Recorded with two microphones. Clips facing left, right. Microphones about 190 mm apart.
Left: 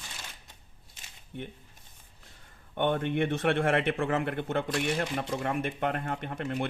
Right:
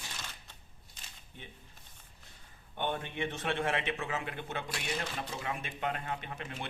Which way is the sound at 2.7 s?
60° left (ahead or behind).